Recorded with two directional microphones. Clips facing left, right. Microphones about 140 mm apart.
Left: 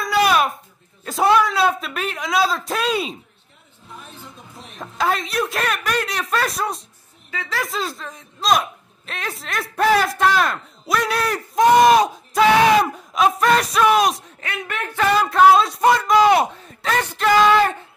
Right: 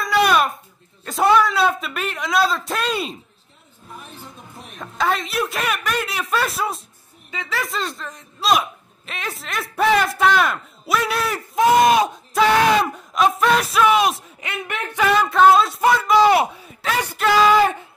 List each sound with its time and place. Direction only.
0.0 s babbling: centre (ahead or behind)
1.0 s a man's voice: centre (ahead or behind)
4.7 s a man's voice: centre (ahead or behind)
14.4 s speech: 20° right (ahead or behind)
15.0 s a man's voice: centre (ahead or behind)